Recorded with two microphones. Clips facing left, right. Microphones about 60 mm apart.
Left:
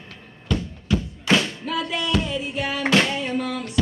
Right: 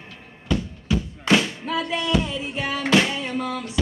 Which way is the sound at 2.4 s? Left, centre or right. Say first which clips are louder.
Left 1 dB; right.